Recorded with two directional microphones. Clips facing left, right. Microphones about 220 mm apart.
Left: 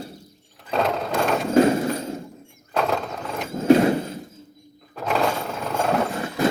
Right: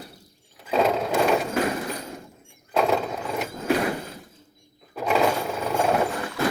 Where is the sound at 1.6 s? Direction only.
25° left (ahead or behind).